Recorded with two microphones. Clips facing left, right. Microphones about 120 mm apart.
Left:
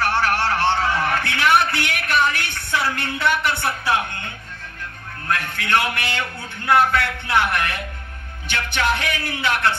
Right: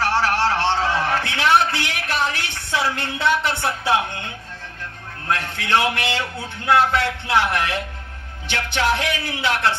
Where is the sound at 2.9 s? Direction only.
25° right (ahead or behind).